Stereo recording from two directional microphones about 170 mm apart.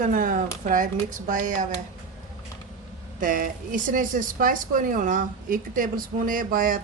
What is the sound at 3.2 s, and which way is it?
Speech, 50° right (ahead or behind).